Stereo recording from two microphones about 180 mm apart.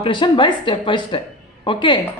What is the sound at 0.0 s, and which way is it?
A woman's voice, 30° left (ahead or behind).